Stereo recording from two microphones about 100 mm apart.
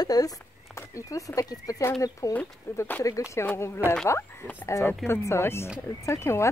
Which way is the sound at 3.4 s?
25° left (ahead or behind).